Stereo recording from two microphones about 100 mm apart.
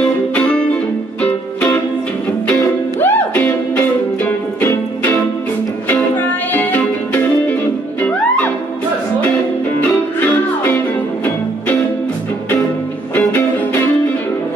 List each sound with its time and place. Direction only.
0.3 s music: 10° left (ahead or behind)
3.0 s music: 15° left (ahead or behind)